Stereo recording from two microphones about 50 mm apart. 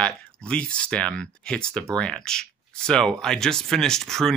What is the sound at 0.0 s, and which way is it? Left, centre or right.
Speech, left.